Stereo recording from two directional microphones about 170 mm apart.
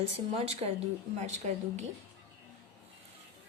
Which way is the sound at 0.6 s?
35° right (ahead or behind).